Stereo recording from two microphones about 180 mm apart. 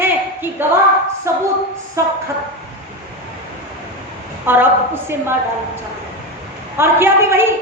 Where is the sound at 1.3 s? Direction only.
15° right (ahead or behind).